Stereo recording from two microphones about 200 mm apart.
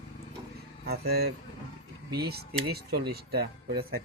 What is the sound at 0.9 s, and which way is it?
Speech, 50° right (ahead or behind).